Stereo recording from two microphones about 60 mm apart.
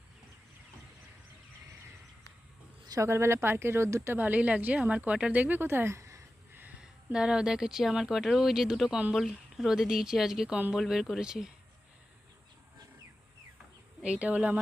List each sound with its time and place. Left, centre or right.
3.1 s speech: right
4.1 s speech: right
5.5 s a woman's voice: right
6.0 s a sound: right
6.5 s a sound: right
6.7 s speech: centre
14.0 s speech: right